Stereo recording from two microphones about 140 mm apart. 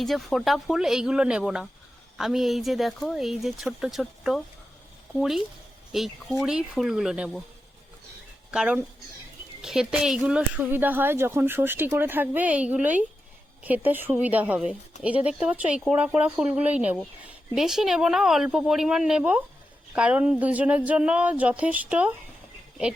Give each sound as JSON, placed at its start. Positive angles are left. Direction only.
{"t": 0.0, "sound": "speech", "side_deg": 0}
{"t": 8.4, "sound": "speech", "side_deg": -5}